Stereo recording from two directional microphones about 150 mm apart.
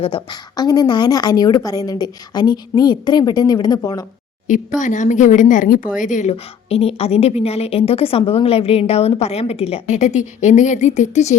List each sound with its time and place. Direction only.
0.0 s a woman's voice: 35° left (ahead or behind)
4.8 s speech: 55° left (ahead or behind)
6.0 s speech: 55° left (ahead or behind)
6.3 s a woman's voice: 40° left (ahead or behind)